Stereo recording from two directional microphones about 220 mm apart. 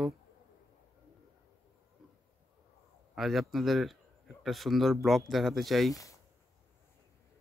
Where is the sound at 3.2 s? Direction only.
Centre (ahead or behind).